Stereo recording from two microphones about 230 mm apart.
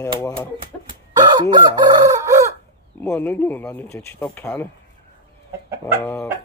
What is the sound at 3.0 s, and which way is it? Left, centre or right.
A man's voice, centre.